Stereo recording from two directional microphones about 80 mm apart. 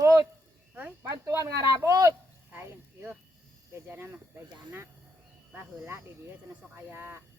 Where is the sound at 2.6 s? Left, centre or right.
Right.